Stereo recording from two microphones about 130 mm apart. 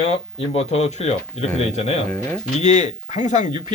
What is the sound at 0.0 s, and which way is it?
Speech, 55° left (ahead or behind).